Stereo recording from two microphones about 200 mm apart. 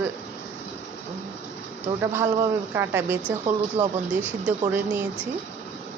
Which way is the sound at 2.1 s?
10° right (ahead or behind).